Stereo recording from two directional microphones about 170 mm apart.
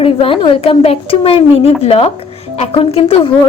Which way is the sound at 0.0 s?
30° left (ahead or behind).